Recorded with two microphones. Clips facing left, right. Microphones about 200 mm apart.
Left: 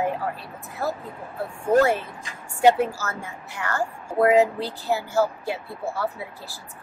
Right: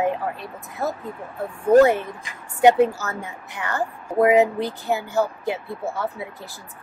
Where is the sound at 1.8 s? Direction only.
20° right (ahead or behind).